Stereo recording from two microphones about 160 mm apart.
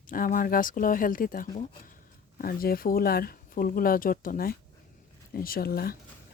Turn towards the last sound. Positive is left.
turn(degrees=70)  # may be behind; listen again after turning